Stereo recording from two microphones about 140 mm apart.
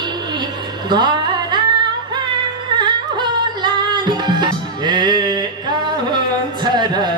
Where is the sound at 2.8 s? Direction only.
35° right (ahead or behind).